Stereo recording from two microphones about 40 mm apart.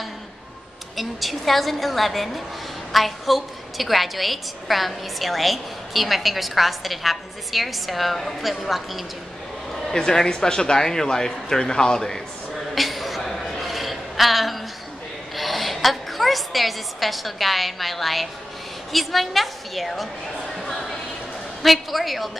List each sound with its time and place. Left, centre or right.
0.9 s a woman's voice: centre
12.7 s a sound: centre
15.3 s a woman's voice: centre
21.6 s a woman's voice: centre